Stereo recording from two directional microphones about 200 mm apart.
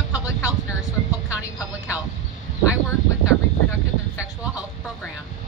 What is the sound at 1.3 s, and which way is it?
Music, 5° right (ahead or behind).